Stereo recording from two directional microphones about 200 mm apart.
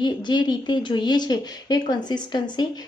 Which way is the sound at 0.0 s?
20° left (ahead or behind).